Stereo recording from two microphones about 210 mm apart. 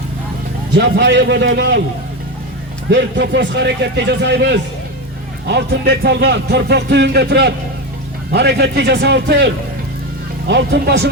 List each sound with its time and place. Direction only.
0.8 s speech: 55° right (ahead or behind)
2.9 s speech: 55° right (ahead or behind)
10.5 s speech: 50° right (ahead or behind)